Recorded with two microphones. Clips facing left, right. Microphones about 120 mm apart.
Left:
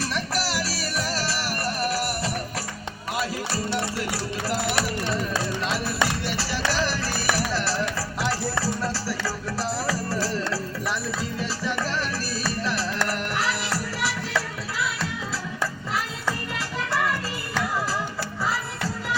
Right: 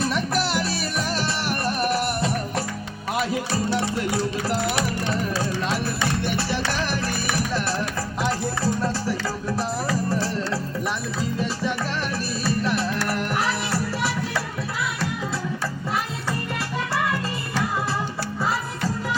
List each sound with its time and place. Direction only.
0.3 s music: 20° right (ahead or behind)
1.8 s music: 55° right (ahead or behind)
8.2 s music: 20° right (ahead or behind)
13.1 s music: 25° right (ahead or behind)